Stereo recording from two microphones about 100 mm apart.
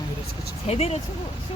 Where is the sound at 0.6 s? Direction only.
90° left.